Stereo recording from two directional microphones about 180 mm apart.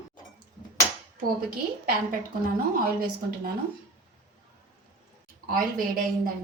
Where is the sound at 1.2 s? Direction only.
55° right (ahead or behind).